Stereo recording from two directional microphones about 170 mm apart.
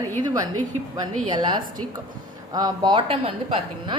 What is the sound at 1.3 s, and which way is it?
A woman's voice, 25° right (ahead or behind).